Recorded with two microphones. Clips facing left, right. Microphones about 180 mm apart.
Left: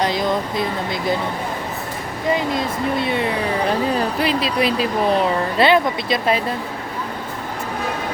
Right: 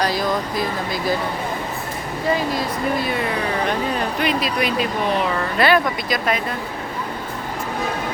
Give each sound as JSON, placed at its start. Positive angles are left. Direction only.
{"t": 0.0, "sound": "speech", "side_deg": 20}
{"t": 2.3, "sound": "speech", "side_deg": 25}